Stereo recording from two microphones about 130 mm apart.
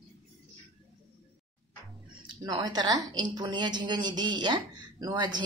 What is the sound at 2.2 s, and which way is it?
A woman's voice, 35° right (ahead or behind).